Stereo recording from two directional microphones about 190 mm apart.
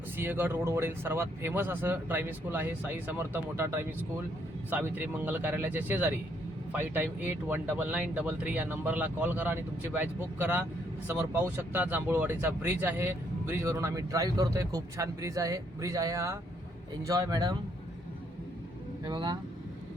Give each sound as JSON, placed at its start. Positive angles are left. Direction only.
{"t": 0.2, "sound": "speech", "side_deg": -10}
{"t": 19.0, "sound": "speech", "side_deg": -20}